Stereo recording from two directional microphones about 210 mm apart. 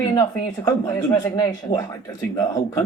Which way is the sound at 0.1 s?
15° left (ahead or behind).